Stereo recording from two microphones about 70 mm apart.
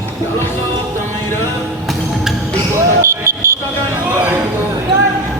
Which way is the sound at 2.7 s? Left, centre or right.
Right.